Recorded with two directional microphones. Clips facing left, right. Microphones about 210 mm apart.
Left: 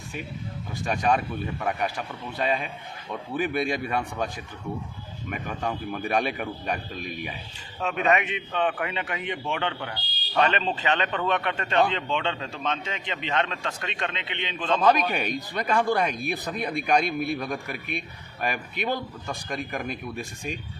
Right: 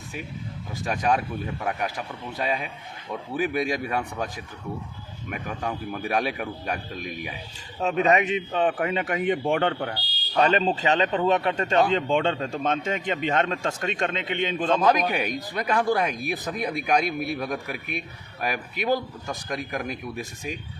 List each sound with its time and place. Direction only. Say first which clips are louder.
0.9 s a man's voice: even; 5° right (ahead or behind)
5.3 s speech: even; centre (ahead or behind)
7.8 s a man's voice: right 3 dB; 35° right (ahead or behind)
15.1 s a man's voice: right 1 dB; 5° right (ahead or behind)